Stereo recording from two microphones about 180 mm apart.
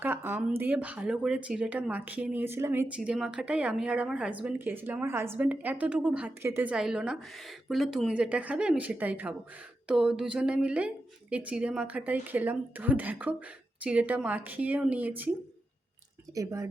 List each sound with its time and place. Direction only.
0.0 s speech: 10° right (ahead or behind)
16.3 s speech: 15° right (ahead or behind)